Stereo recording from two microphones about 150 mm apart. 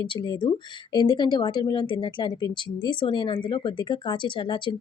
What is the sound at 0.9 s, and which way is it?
Speech, 30° left (ahead or behind).